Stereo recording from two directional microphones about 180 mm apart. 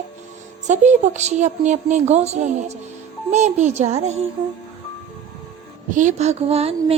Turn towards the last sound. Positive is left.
turn(degrees=-35)  # may be behind; listen again after turning